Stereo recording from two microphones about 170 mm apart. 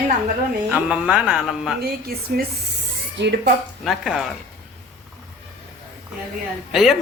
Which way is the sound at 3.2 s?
80° right.